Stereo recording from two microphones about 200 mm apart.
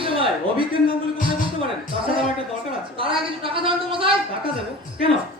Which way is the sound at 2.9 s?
25° right (ahead or behind).